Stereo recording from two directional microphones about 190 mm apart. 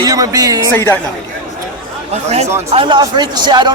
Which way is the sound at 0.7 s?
10° left (ahead or behind).